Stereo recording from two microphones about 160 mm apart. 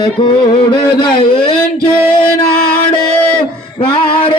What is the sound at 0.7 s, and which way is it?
Speech, 30° left (ahead or behind).